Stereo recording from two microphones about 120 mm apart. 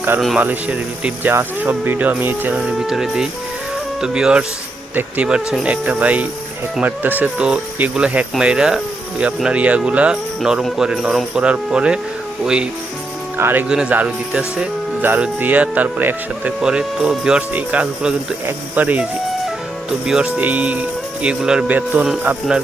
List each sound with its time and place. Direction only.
0.3 s speech: 10° right (ahead or behind)
2.6 s speech: 5° right (ahead or behind)
13.3 s speech: 15° right (ahead or behind)
20.1 s speech: 5° right (ahead or behind)